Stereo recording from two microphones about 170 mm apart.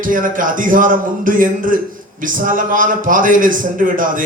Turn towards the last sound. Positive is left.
turn(degrees=-50)  # may be behind; listen again after turning